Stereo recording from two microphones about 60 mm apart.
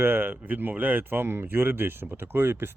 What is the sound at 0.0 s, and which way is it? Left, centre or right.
Speech, right.